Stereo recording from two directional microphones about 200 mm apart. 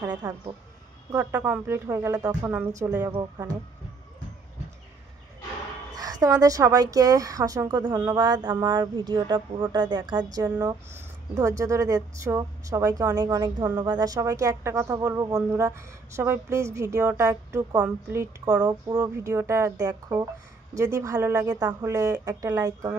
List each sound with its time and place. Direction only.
1.1 s a woman's voice: 10° right (ahead or behind)
5.9 s a woman's voice: 20° right (ahead or behind)
10.4 s speech: 10° right (ahead or behind)